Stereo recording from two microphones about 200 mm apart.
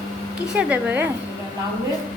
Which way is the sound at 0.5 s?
10° right (ahead or behind).